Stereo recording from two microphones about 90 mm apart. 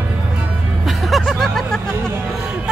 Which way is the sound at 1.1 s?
5° left (ahead or behind).